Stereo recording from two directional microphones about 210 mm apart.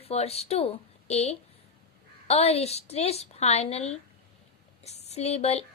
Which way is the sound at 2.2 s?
30° left (ahead or behind).